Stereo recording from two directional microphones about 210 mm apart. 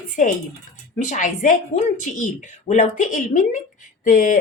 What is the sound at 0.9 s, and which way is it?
A woman's voice, 35° left (ahead or behind).